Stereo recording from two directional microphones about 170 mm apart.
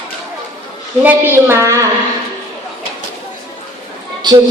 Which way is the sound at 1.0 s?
15° right (ahead or behind).